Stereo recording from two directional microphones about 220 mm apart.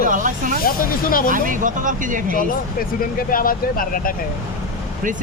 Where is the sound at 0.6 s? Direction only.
40° left (ahead or behind).